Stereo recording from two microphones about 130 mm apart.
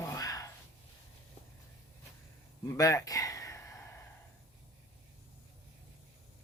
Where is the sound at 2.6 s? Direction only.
25° left (ahead or behind).